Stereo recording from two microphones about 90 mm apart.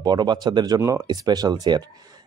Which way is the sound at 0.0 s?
50° right (ahead or behind).